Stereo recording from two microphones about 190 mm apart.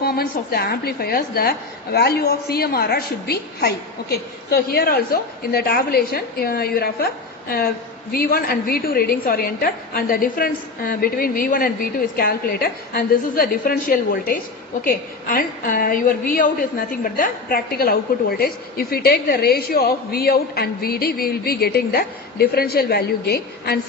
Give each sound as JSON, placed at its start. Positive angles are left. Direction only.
{"t": 0.0, "sound": "a woman's voice", "side_deg": 55}